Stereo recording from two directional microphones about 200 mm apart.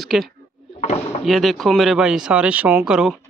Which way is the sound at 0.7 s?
30° left (ahead or behind).